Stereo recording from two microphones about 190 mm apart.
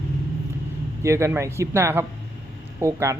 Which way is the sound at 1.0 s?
15° right (ahead or behind).